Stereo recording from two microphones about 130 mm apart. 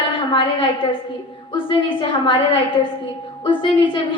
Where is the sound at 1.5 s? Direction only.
40° left (ahead or behind).